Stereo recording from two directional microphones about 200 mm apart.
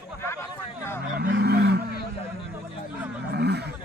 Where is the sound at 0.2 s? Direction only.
15° left (ahead or behind).